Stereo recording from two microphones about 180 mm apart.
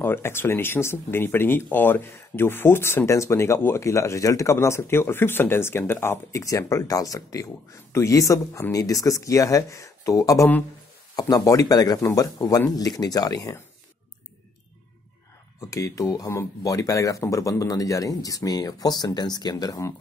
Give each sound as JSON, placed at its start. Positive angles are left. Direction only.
{"t": 0.0, "sound": "speech", "side_deg": 15}
{"t": 15.7, "sound": "speech", "side_deg": 20}